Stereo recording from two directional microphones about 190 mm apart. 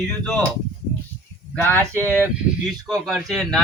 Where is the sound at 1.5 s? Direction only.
10° left (ahead or behind).